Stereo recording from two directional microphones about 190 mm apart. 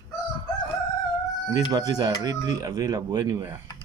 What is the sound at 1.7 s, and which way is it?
Speech, 20° right (ahead or behind).